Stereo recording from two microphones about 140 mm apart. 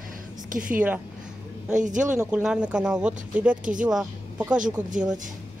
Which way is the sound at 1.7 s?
65° right (ahead or behind).